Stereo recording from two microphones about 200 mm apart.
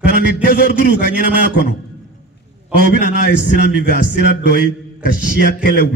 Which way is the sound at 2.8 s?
45° right (ahead or behind).